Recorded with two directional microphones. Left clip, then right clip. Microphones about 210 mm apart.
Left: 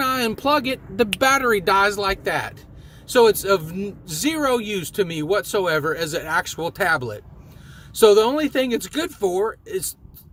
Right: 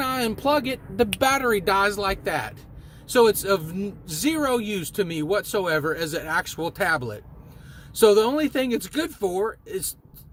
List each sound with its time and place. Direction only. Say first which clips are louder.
0.0 s speech: left 3 dB; 10° left (ahead or behind)